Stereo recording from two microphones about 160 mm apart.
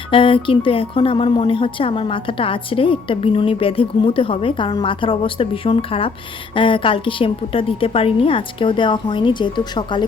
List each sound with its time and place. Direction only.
0.1 s speech: 30° left (ahead or behind)